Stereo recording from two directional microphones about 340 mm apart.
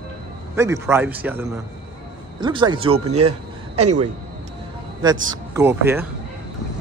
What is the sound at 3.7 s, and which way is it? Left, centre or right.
Speech, centre.